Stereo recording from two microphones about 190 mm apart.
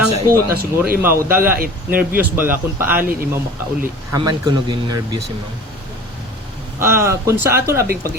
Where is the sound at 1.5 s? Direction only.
50° right (ahead or behind).